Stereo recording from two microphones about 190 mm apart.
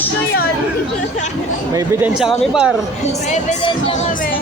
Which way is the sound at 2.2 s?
5° right (ahead or behind).